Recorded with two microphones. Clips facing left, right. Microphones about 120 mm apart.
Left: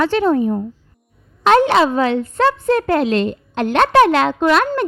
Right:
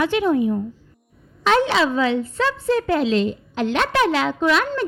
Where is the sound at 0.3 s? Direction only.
45° left (ahead or behind).